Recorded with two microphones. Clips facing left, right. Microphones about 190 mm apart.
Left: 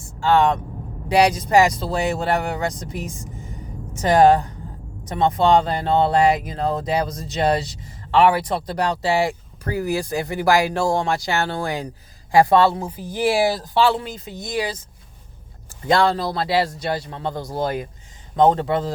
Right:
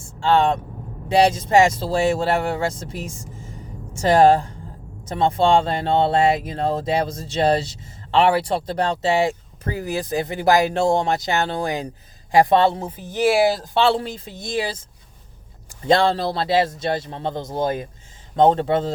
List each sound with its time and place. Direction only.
0.2 s speech: 25° right (ahead or behind)
15.9 s speech: 25° right (ahead or behind)